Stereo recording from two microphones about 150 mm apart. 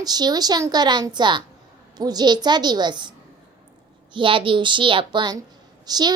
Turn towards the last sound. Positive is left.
turn(degrees=-25)  # may be behind; listen again after turning